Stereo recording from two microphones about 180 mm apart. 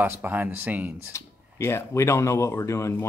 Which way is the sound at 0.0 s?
10° right (ahead or behind).